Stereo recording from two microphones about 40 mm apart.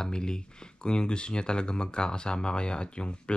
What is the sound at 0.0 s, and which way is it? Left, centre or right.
Speech, centre.